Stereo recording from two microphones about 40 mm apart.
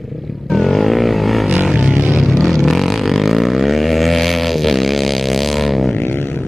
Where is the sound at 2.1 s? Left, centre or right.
Centre.